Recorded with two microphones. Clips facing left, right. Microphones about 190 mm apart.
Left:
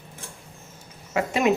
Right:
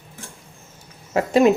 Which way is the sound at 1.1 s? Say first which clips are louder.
Right 6 dB; 40° right (ahead or behind).